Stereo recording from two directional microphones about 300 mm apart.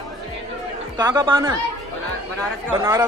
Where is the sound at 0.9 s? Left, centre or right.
Centre.